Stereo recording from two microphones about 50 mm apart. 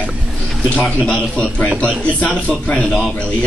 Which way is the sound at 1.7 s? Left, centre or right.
Right.